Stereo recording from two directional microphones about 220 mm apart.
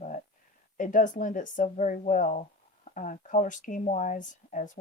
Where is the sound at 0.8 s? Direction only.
35° left (ahead or behind).